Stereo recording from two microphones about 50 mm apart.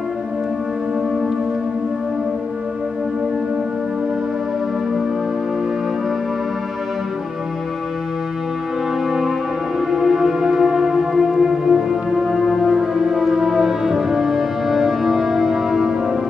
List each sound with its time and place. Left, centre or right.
9.8 s music: centre